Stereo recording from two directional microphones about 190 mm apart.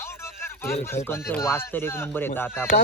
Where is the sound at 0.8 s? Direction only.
15° left (ahead or behind).